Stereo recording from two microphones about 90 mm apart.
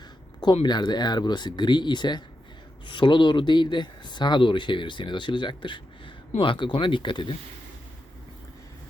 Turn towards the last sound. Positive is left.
turn(degrees=65)  # may be behind; listen again after turning